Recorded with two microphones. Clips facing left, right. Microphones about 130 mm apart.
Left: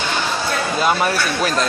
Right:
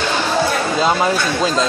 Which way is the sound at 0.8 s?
20° right (ahead or behind).